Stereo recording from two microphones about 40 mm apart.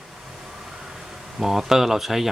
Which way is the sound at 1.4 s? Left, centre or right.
Centre.